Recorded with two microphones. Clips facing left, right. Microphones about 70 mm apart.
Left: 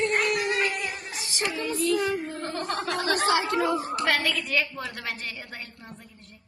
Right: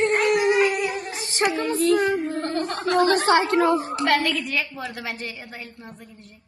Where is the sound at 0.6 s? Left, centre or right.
Centre.